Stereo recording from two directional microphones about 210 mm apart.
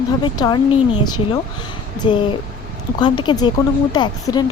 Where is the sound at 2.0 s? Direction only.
20° left (ahead or behind).